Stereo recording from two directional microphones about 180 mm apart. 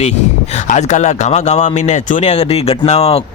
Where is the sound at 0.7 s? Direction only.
40° left (ahead or behind).